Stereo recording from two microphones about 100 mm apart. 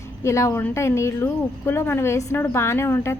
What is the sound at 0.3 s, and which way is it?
A woman's voice, 30° left (ahead or behind).